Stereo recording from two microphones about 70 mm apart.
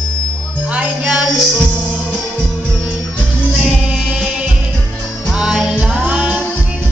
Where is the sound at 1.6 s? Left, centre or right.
Centre.